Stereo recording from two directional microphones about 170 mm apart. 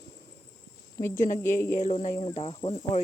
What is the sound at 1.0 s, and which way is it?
Speech, 15° left (ahead or behind).